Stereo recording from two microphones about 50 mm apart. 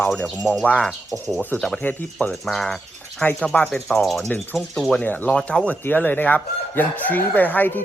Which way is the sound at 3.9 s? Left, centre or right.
Centre.